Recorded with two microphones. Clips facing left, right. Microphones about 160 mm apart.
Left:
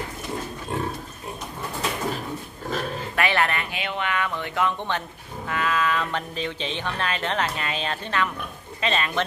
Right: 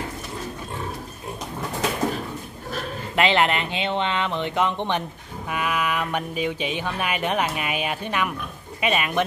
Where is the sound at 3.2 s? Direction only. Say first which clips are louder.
Right 4 dB; 20° right (ahead or behind).